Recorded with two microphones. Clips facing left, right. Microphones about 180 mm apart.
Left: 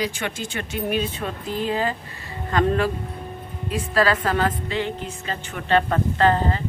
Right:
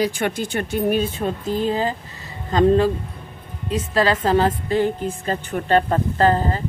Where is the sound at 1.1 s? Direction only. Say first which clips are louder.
Right 5 dB; 30° right (ahead or behind).